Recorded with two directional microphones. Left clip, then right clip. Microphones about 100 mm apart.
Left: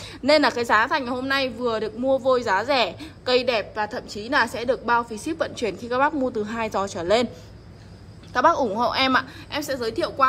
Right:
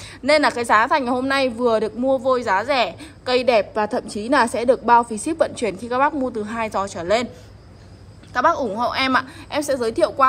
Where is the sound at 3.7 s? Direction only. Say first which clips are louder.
Right 5 dB; 5° left (ahead or behind); by 7.3 s 45° left (ahead or behind).